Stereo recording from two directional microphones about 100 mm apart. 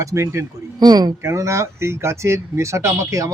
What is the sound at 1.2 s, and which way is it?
Speech, 30° right (ahead or behind).